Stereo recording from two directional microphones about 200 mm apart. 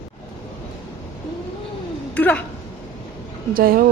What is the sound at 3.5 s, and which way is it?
Speech, 45° right (ahead or behind).